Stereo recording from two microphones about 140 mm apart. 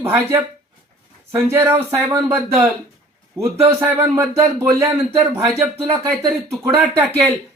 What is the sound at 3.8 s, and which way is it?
Speech, 15° right (ahead or behind).